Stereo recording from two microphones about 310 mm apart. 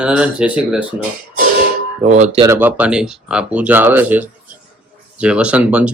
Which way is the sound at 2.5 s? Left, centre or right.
Centre.